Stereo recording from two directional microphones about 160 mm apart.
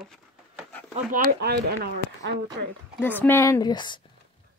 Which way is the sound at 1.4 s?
90° right.